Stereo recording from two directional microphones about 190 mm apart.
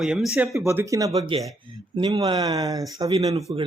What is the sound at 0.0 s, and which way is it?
Speech, centre (ahead or behind).